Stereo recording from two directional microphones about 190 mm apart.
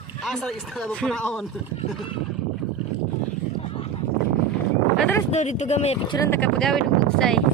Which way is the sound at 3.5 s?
30° left (ahead or behind).